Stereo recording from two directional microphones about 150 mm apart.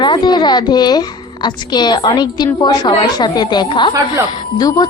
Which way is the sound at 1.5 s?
30° left (ahead or behind).